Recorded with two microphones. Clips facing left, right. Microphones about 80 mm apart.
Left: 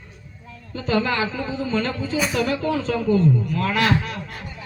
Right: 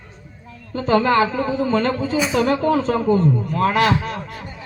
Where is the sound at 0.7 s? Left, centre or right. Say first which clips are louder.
Right 6 dB; right.